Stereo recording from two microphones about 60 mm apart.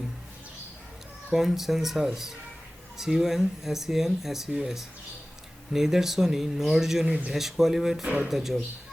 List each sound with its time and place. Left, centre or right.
1.3 s speech: centre
7.1 s speech: centre
7.3 s speech: centre